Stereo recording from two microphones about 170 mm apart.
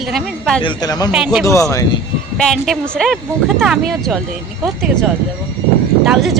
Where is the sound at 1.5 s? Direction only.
20° left (ahead or behind).